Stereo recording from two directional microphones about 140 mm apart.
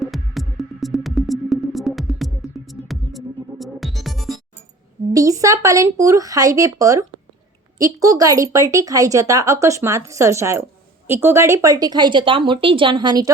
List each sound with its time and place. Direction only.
0.0 s music: centre (ahead or behind)
5.1 s a woman's voice: 25° right (ahead or behind)